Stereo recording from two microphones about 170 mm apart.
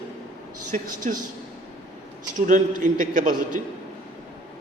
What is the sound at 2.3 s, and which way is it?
A man's voice, 50° right (ahead or behind).